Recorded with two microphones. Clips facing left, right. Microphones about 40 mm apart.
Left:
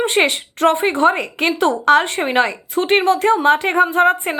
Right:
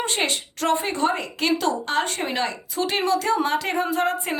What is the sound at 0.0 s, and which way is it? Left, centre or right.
A woman's voice, left.